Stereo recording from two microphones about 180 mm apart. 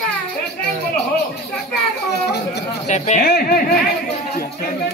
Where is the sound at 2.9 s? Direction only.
40° left (ahead or behind).